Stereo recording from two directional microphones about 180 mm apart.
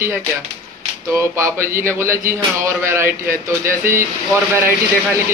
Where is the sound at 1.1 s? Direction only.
15° right (ahead or behind).